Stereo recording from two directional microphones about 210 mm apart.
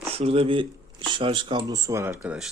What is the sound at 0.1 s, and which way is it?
Speech, 30° right (ahead or behind).